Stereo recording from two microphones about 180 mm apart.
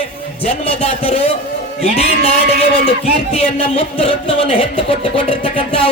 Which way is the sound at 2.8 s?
35° left (ahead or behind).